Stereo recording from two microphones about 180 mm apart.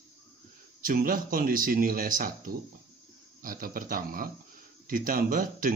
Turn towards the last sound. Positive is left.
turn(degrees=-50)  # may be behind; listen again after turning